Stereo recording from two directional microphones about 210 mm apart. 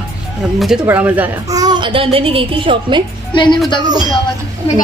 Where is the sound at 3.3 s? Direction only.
20° left (ahead or behind).